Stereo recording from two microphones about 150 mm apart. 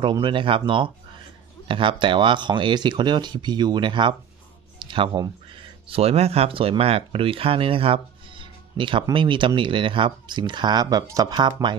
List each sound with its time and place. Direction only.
0.0 s speech: 35° right (ahead or behind)